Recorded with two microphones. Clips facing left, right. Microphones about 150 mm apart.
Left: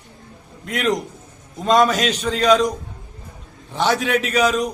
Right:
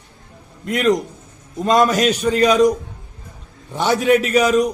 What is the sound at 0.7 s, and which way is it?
A man's voice, centre (ahead or behind).